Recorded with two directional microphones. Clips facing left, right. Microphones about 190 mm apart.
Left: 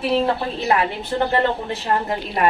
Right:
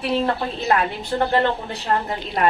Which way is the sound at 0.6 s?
10° left (ahead or behind).